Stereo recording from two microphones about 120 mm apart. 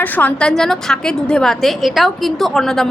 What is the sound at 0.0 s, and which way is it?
A woman's voice, 15° left (ahead or behind).